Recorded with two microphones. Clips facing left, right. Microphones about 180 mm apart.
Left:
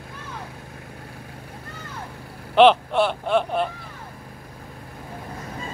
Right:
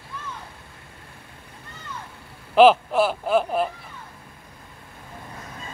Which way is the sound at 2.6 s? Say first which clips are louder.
Even; 5° right (ahead or behind).